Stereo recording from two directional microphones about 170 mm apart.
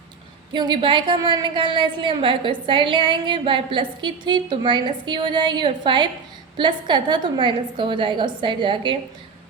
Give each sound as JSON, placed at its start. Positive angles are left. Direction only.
{"t": 0.5, "sound": "a woman's voice", "side_deg": -25}